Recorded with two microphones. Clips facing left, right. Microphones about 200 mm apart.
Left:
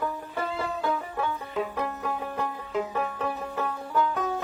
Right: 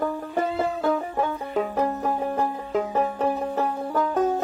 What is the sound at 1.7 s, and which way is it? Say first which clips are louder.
Music: right 6 dB; 40° right (ahead or behind).